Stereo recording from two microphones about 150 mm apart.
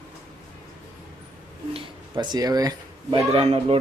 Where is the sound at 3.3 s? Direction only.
40° right (ahead or behind).